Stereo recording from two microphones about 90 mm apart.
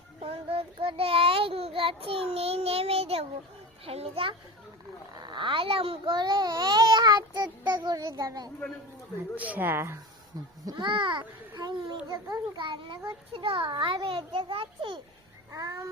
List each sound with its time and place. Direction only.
0.3 s child singing: 90° right
5.2 s a child's voice: 60° right (ahead or behind); by 6.1 s 90° right
6.1 s speech: 55° right (ahead or behind)
9.3 s speech: 20° right (ahead or behind)
10.3 s speech: 40° right (ahead or behind)
10.7 s a child's voice: 60° right (ahead or behind)
15.5 s a sound: 40° right (ahead or behind)